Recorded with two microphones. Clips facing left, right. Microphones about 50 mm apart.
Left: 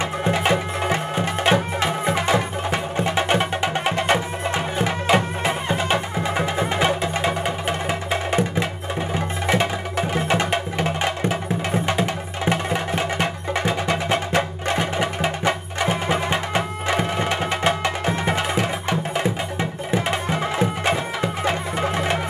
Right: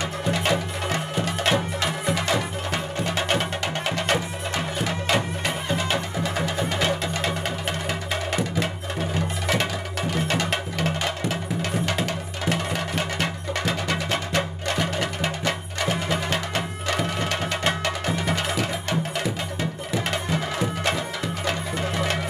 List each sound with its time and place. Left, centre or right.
0.2 s music: left
9.5 s music: left